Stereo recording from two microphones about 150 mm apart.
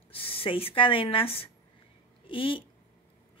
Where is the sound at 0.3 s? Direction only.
40° left (ahead or behind).